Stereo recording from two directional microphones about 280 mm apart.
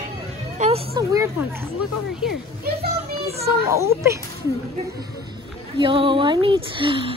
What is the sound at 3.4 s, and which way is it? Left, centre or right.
Speech, centre.